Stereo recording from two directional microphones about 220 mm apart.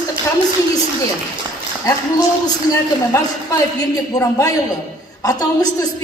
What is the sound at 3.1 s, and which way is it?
A woman's voice, 15° left (ahead or behind).